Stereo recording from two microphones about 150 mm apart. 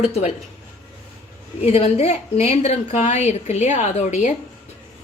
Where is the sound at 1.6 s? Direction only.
40° left (ahead or behind).